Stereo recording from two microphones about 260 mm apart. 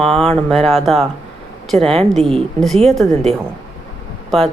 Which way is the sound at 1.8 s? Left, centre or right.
Right.